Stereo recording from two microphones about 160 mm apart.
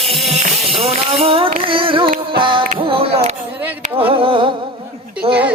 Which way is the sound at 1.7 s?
35° right (ahead or behind).